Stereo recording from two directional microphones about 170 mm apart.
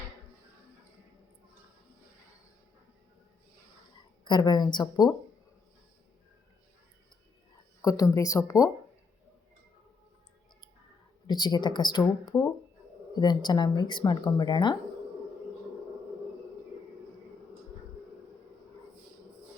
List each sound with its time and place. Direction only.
4.2 s speech: 25° left (ahead or behind)
7.8 s speech: 20° left (ahead or behind)
11.3 s speech: 25° left (ahead or behind)